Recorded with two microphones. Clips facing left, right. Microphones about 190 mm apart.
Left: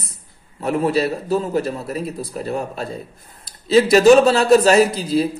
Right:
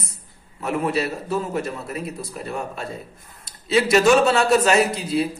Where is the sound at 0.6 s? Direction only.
35° left (ahead or behind).